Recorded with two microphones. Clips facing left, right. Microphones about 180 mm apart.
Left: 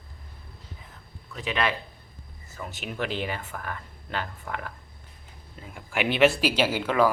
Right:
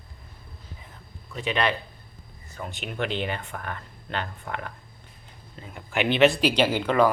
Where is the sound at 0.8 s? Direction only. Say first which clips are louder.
Right 1 dB; centre (ahead or behind).